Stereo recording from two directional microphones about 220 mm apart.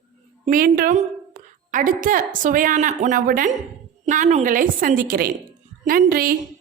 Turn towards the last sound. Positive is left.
turn(degrees=-40)  # may be behind; listen again after turning